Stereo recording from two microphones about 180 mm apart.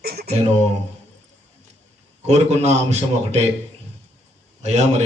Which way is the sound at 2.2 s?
35° right (ahead or behind).